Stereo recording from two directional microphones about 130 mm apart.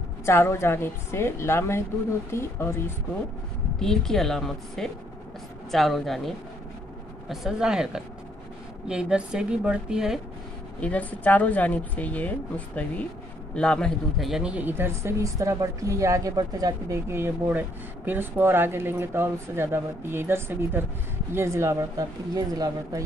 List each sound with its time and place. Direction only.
0.2 s a woman's voice: 20° left (ahead or behind)
3.8 s a woman's voice: 5° left (ahead or behind)
10.8 s a woman's voice: 10° left (ahead or behind); by 23.0 s 30° right (ahead or behind)